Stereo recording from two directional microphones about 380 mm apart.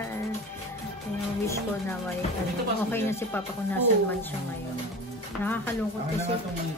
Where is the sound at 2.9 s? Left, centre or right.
Centre.